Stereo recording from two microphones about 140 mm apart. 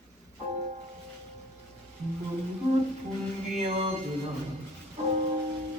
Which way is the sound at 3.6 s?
45° right (ahead or behind).